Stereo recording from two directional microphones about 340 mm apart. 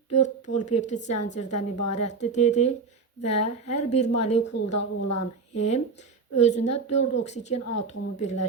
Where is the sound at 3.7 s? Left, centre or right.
Centre.